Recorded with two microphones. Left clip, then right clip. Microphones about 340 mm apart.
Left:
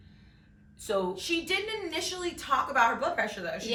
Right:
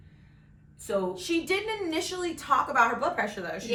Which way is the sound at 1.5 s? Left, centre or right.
Centre.